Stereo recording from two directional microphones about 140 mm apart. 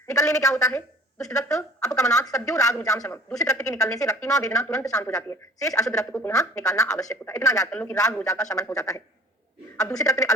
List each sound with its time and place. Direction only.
0.1 s speech: 25° left (ahead or behind)
7.7 s a man's voice: 10° left (ahead or behind)
8.2 s speech: 25° left (ahead or behind)